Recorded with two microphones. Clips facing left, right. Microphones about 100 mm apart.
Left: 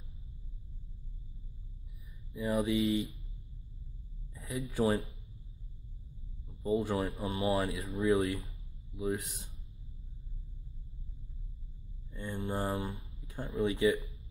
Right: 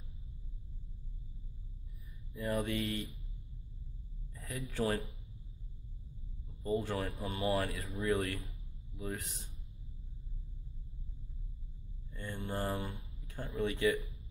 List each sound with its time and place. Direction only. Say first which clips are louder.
2.3 s speech: left 4 dB; 5° left (ahead or behind)
4.6 s speech: left 4 dB; 5° left (ahead or behind)
6.6 s speech: left 4 dB; 10° left (ahead or behind)
8.1 s speech: left 4 dB; 15° left (ahead or behind)
12.1 s mantra: left 3 dB; 15° left (ahead or behind)
12.7 s speech: left 3 dB; 5° left (ahead or behind)
13.7 s speech: left 3 dB; 15° left (ahead or behind)